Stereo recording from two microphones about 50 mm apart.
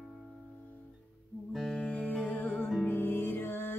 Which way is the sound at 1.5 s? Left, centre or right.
Centre.